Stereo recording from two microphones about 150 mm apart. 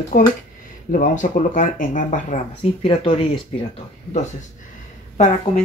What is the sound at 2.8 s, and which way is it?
Speech, 35° left (ahead or behind).